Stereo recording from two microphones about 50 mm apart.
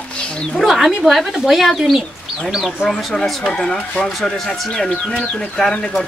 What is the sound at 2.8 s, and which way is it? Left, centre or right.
Speech, centre.